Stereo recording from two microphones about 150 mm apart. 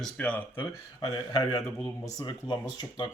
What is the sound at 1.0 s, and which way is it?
Speech, 25° left (ahead or behind).